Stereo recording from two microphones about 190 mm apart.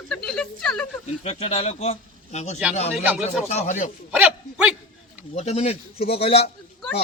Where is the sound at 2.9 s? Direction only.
5° right (ahead or behind).